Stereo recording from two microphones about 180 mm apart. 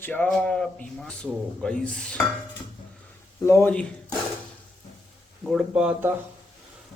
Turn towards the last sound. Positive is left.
turn(degrees=-10)  # may be behind; listen again after turning